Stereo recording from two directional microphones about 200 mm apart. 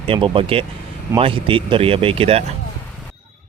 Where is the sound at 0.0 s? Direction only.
25° right (ahead or behind).